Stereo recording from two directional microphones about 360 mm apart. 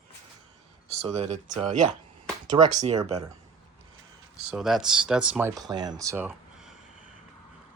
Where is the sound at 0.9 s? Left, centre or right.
Centre.